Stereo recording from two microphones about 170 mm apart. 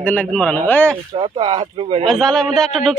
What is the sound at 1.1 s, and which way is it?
Speech, 30° right (ahead or behind).